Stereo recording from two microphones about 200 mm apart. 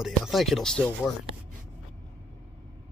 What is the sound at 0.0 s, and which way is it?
Speech, centre (ahead or behind).